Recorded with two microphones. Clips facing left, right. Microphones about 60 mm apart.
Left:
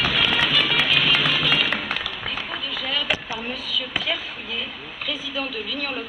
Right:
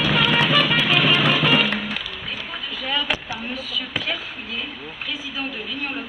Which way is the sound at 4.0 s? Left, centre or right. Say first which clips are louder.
Even; right.